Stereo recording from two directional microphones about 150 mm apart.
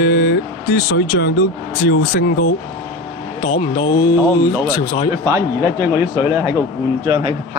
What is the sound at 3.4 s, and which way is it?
Speech, 40° left (ahead or behind).